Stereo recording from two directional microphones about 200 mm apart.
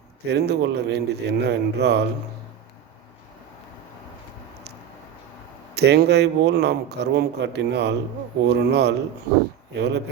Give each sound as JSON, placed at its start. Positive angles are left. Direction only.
{"t": 0.3, "sound": "speech", "side_deg": -55}
{"t": 5.7, "sound": "speech", "side_deg": -55}